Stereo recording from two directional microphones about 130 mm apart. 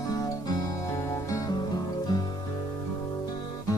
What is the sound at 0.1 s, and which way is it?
Music, 30° left (ahead or behind).